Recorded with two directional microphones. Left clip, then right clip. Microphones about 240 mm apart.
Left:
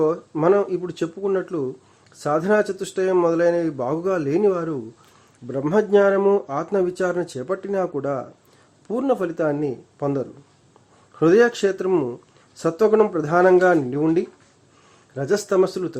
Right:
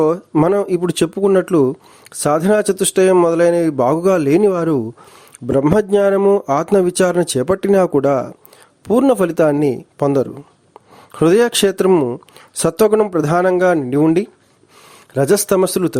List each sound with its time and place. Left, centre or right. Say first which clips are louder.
0.0 s speech: right 5 dB; right